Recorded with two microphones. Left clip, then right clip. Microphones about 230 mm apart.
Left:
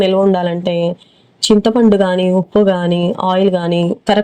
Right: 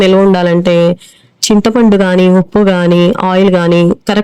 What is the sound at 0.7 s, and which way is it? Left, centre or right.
Speech, right.